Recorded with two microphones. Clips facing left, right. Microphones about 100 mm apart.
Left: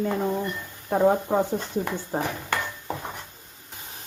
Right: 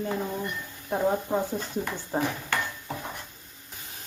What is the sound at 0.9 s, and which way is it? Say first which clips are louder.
Speech: left 5 dB; 40° left (ahead or behind).